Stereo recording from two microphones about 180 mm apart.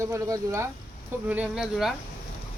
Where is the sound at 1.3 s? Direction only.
5° right (ahead or behind).